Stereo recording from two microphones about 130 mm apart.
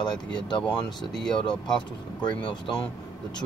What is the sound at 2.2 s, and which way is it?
Speech, 40° left (ahead or behind).